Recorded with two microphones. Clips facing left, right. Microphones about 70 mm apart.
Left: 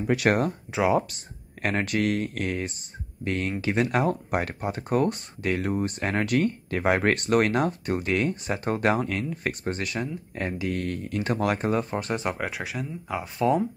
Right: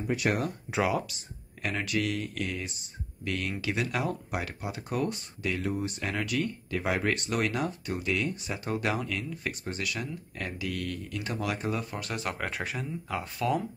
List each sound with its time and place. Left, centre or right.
0.0 s speech: left
1.1 s speech: left
12.4 s speech: centre
13.4 s speech: left